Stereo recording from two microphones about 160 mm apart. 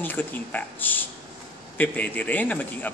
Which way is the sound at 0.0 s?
10° left (ahead or behind).